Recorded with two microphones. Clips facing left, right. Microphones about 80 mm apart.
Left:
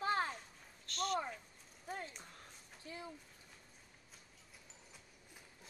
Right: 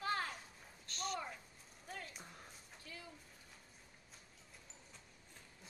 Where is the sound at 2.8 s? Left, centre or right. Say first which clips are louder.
Left 6 dB; left.